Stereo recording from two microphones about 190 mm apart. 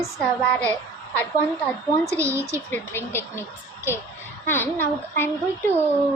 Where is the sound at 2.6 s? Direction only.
10° left (ahead or behind).